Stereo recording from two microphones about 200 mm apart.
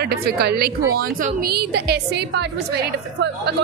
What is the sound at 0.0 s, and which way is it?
A woman's voice, 50° right (ahead or behind).